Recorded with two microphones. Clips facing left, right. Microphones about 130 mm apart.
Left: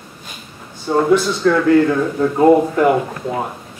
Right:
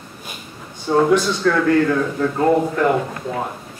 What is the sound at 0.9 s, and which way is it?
A man's voice, 5° left (ahead or behind).